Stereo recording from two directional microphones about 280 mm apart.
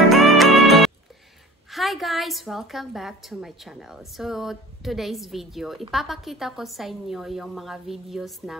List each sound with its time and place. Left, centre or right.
0.1 s music: centre
1.7 s a woman's voice: centre